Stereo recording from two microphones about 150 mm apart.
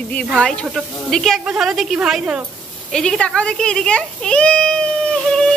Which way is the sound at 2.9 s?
5° left (ahead or behind).